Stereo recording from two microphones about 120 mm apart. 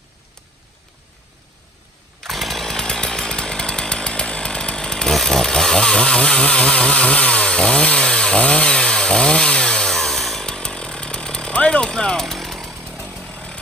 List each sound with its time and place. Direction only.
2.1 s chainsaw: centre (ahead or behind)
12.7 s chainsaw: 15° right (ahead or behind)
13.3 s chainsaw: 10° left (ahead or behind)